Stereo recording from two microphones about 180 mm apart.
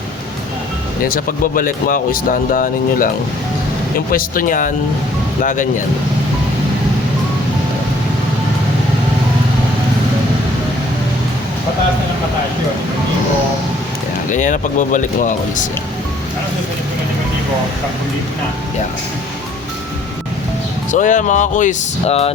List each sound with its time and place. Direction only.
1.0 s speech: 50° left (ahead or behind)
4.1 s speech: 50° left (ahead or behind)
14.3 s speech: 45° left (ahead or behind)
20.9 s speech: 45° left (ahead or behind)